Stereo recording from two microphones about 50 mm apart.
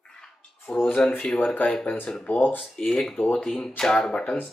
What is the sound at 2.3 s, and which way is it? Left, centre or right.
Speech, left.